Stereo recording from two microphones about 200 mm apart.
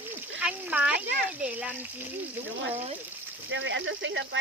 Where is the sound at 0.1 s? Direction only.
10° right (ahead or behind).